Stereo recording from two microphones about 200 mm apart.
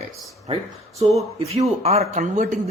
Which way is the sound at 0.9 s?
Centre (ahead or behind).